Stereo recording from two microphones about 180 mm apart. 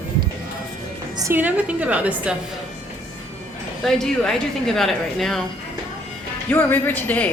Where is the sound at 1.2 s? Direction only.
10° right (ahead or behind).